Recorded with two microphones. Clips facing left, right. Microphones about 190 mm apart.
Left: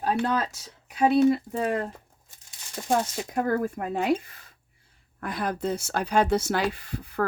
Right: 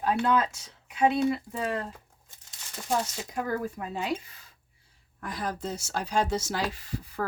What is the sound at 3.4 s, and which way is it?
Speech, 55° left (ahead or behind).